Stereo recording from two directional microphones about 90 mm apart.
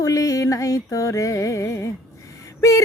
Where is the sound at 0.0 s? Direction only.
40° left (ahead or behind).